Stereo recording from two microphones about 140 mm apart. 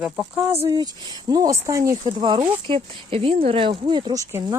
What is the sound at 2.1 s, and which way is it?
Speech, 35° right (ahead or behind).